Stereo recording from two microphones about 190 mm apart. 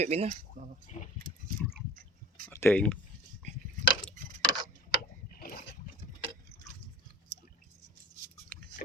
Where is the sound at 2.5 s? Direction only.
10° left (ahead or behind).